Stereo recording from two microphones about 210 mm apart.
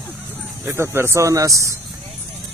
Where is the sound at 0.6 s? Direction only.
10° right (ahead or behind).